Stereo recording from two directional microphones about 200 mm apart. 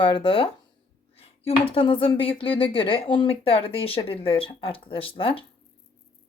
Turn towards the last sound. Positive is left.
turn(degrees=25)  # may be behind; listen again after turning